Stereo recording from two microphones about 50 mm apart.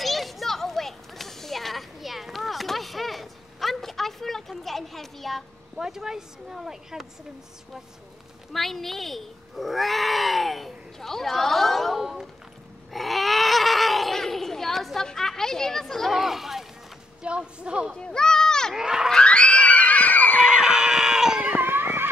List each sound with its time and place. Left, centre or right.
0.0 s children playing: centre
5.8 s speech: centre
8.5 s speech: centre
12.0 s speech: centre
12.9 s children playing: centre
15.0 s speech: centre
17.2 s a woman's voice: right
17.9 s a sound: centre
18.8 s speech: centre
19.1 s screaming: left
20.4 s screaming: centre
21.5 s music: right